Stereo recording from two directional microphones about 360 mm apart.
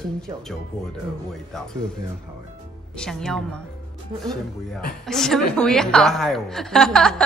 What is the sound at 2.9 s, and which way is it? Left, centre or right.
Speech, centre.